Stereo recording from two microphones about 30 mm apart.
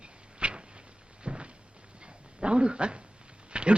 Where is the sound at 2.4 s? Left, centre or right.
Right.